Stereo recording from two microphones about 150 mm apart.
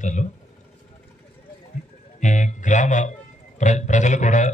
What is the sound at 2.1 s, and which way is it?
A man's voice, 55° left (ahead or behind).